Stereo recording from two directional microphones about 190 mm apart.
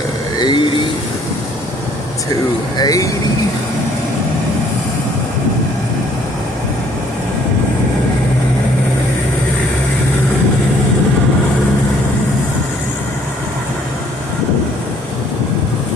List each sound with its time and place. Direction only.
0.3 s vehicle: 25° left (ahead or behind)
2.7 s speech: 20° left (ahead or behind)